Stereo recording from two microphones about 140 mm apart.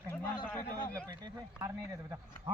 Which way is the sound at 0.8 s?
10° left (ahead or behind).